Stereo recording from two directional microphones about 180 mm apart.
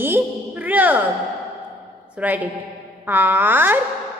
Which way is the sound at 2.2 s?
10° right (ahead or behind).